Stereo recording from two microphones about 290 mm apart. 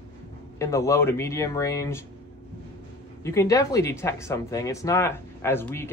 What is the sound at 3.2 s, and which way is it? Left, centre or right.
Speech, centre.